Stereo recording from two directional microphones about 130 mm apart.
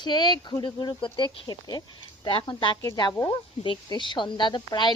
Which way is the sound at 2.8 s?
25° left (ahead or behind).